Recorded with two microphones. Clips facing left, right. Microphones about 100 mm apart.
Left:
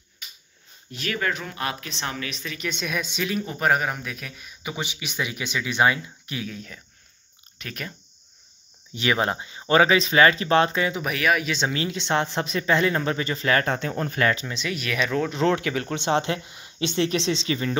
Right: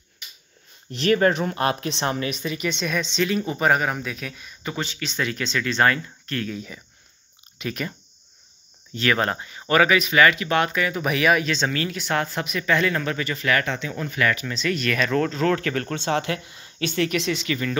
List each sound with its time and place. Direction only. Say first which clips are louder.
1.0 s speech: right 9 dB; 35° right (ahead or behind)
2.5 s speech: even; centre (ahead or behind)
4.7 s speech: right 2 dB; 15° left (ahead or behind)
6.5 s speech: right 5 dB; 5° right (ahead or behind)
8.9 s speech: right 1 dB; 15° left (ahead or behind)
11.0 s speech: right 6 dB; centre (ahead or behind)
11.4 s speech: right 1 dB; 15° left (ahead or behind); by 13.7 s 30° left (ahead or behind)
13.7 s speech: left 1 dB; 40° left (ahead or behind); by 15.3 s 10° left (ahead or behind)
15.3 s speech: even; 20° left (ahead or behind)